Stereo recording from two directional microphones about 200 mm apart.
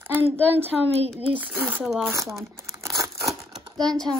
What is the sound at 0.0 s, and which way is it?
A woman's voice, 10° right (ahead or behind).